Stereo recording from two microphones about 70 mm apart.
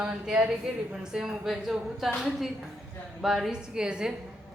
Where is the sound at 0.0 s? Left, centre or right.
Centre.